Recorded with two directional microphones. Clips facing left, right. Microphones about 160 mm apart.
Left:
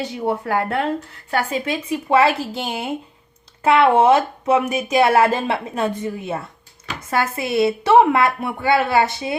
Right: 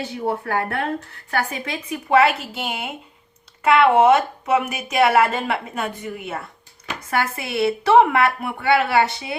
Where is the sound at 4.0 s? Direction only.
30° left (ahead or behind).